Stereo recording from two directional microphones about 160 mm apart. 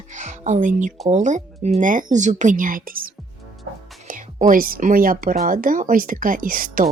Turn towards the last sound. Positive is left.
turn(degrees=-60)  # may be behind; listen again after turning